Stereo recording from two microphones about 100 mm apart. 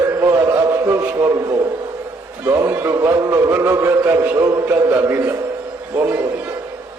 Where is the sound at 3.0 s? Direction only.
35° right (ahead or behind).